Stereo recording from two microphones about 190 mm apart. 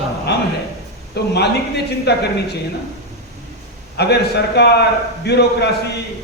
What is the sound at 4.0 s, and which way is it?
Speech, 60° left (ahead or behind).